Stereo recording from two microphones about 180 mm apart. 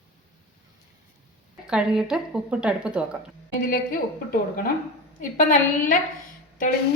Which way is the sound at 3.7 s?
55° left (ahead or behind).